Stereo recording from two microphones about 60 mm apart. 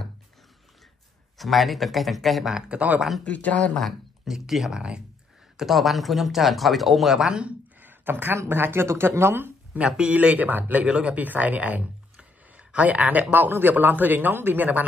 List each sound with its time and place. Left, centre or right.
1.4 s speech: centre
2.5 s speech: right
3.3 s speech: left
4.2 s speech: centre
5.6 s speech: centre
7.8 s a sound: right
8.4 s speech: right
9.8 s speech: centre